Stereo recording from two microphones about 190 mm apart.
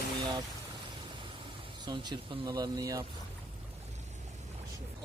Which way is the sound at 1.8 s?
25° right (ahead or behind).